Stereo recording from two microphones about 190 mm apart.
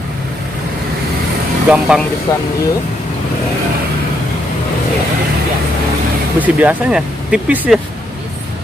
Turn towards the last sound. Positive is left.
turn(degrees=-5)  # may be behind; listen again after turning